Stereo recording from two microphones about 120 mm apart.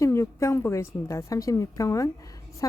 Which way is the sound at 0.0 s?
25° left (ahead or behind).